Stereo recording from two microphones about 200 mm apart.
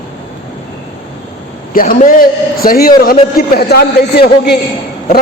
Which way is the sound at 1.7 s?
45° left (ahead or behind).